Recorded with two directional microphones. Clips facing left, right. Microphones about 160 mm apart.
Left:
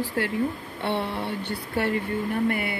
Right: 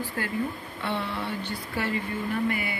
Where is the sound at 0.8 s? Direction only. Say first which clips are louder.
Left 3 dB; 65° left (ahead or behind).